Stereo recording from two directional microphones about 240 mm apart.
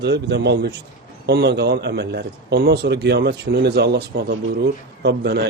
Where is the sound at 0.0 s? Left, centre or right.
Right.